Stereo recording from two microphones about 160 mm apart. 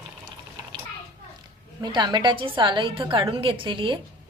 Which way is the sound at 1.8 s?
25° right (ahead or behind).